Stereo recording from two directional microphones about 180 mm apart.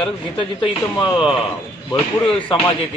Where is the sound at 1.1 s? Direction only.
5° right (ahead or behind).